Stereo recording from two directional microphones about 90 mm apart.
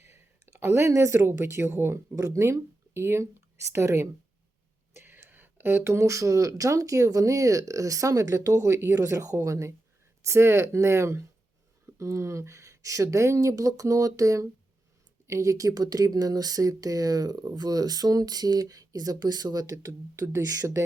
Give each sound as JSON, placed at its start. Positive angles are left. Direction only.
{"t": 0.0, "sound": "speech", "side_deg": -30}